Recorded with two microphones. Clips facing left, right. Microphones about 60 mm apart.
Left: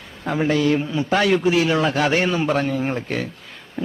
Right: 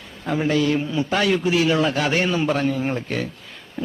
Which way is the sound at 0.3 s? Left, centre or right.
Left.